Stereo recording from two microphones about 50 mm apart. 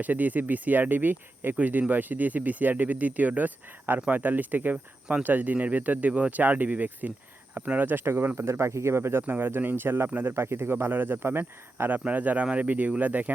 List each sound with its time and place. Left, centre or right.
0.0 s speech: right
9.2 s speech: right
11.9 s speech: right